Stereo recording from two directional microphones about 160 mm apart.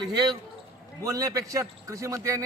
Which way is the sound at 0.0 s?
25° right (ahead or behind).